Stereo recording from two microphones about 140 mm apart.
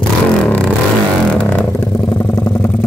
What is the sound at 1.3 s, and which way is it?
Vehicle, 15° left (ahead or behind).